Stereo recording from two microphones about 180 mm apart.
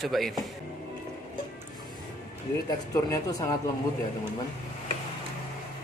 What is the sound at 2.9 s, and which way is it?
Speech, 20° left (ahead or behind).